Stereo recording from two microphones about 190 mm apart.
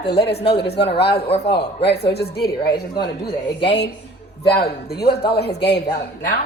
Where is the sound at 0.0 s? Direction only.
60° left (ahead or behind).